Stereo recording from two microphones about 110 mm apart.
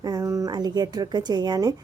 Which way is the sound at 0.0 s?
30° right (ahead or behind).